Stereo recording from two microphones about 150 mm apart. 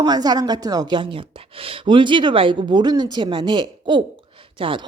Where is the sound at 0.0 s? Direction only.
25° right (ahead or behind).